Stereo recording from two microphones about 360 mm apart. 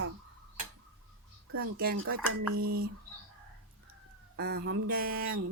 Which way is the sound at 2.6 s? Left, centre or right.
Right.